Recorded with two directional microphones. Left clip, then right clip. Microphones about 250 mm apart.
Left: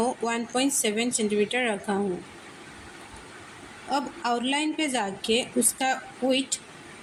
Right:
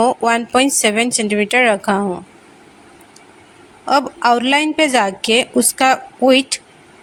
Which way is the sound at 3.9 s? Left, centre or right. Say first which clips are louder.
Right 13 dB; right.